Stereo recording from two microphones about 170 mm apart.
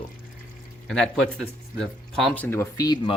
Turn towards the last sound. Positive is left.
turn(degrees=25)  # may be behind; listen again after turning